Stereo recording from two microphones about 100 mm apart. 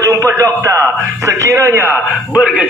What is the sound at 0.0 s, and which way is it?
A man's voice, 30° right (ahead or behind).